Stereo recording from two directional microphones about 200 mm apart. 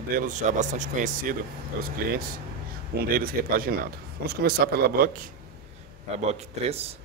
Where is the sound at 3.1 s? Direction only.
45° right (ahead or behind).